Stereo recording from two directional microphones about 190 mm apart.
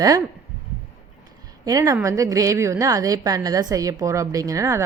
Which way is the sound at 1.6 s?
20° right (ahead or behind).